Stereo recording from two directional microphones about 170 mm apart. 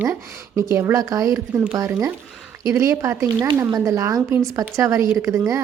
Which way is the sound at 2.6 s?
20° right (ahead or behind).